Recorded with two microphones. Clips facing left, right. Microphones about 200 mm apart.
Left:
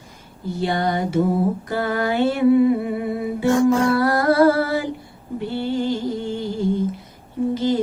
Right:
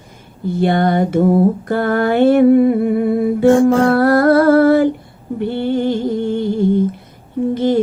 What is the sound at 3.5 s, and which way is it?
Music, 30° right (ahead or behind).